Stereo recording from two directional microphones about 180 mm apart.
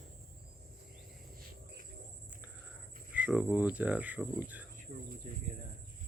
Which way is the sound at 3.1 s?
5° right (ahead or behind).